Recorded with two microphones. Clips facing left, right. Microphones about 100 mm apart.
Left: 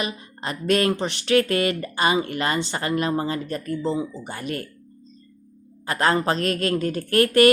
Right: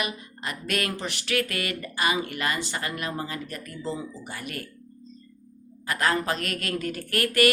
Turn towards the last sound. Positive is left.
turn(degrees=30)  # may be behind; listen again after turning